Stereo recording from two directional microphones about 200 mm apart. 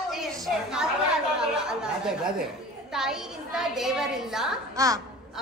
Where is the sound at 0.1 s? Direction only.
5° right (ahead or behind).